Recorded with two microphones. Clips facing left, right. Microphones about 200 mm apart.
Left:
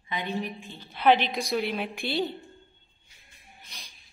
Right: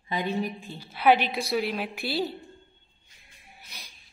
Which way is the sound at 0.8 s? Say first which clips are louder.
Even; 10° right (ahead or behind).